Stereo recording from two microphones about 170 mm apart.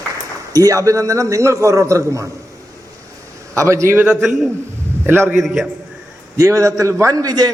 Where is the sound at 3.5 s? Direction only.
15° right (ahead or behind).